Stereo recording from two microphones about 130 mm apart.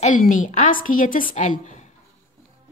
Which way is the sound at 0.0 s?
80° left.